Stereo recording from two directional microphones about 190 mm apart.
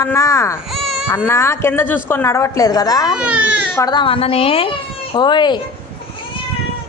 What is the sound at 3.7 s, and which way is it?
A woman's voice, 20° left (ahead or behind).